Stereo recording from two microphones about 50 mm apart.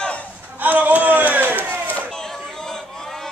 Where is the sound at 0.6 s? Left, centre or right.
Right.